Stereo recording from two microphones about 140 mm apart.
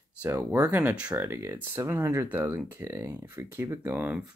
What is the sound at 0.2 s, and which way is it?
Speech, 15° right (ahead or behind).